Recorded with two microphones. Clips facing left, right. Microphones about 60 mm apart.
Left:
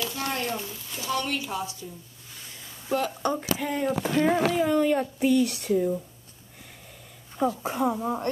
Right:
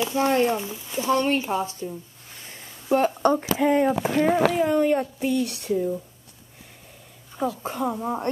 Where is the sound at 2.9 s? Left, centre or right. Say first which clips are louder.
Right 6 dB; right.